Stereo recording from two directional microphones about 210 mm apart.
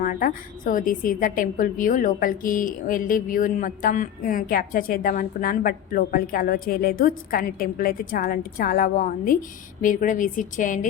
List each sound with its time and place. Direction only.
0.0 s a woman's voice: 40° left (ahead or behind)